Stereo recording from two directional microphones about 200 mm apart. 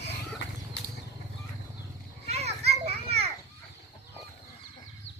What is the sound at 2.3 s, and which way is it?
Children playing, 30° right (ahead or behind).